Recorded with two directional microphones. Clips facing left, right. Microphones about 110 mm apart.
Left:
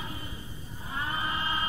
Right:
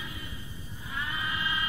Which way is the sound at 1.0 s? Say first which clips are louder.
Left 2 dB; 35° left (ahead or behind).